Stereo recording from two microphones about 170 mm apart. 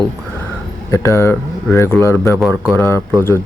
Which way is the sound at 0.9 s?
15° left (ahead or behind).